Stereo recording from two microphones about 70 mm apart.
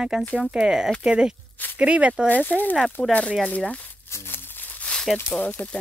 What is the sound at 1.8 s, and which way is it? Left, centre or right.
Speech, centre.